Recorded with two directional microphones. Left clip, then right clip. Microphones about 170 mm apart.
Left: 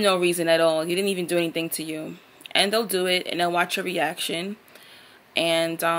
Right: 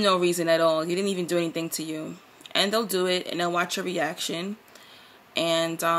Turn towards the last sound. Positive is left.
turn(degrees=-15)  # may be behind; listen again after turning